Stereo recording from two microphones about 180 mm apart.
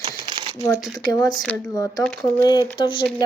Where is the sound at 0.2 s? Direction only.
25° right (ahead or behind).